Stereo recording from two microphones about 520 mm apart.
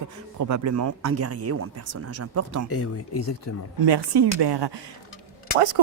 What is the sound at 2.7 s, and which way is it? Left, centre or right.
Speech, left.